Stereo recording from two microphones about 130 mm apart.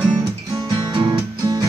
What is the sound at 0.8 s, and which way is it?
Music, 35° right (ahead or behind).